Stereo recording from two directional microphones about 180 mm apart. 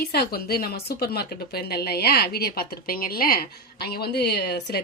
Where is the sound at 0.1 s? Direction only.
60° left (ahead or behind).